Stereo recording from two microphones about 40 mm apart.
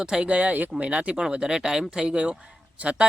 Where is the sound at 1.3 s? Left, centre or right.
Centre.